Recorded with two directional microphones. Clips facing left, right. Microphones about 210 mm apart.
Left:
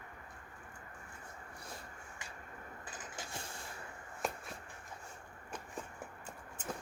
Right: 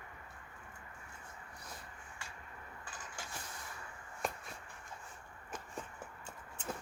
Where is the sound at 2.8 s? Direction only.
25° left (ahead or behind).